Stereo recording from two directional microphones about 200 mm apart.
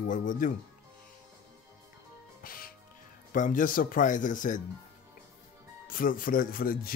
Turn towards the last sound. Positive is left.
turn(degrees=45)  # may be behind; listen again after turning